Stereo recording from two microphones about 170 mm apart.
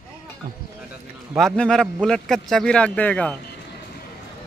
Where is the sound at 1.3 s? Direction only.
5° left (ahead or behind).